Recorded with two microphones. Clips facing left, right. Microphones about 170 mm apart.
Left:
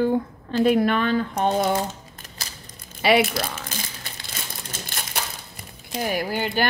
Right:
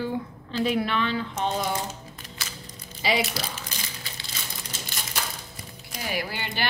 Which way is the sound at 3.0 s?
55° left (ahead or behind).